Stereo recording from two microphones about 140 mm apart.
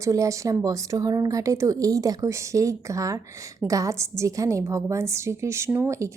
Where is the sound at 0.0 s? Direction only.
25° right (ahead or behind).